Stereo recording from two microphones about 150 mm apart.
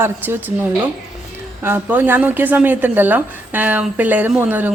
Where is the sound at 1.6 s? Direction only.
15° right (ahead or behind).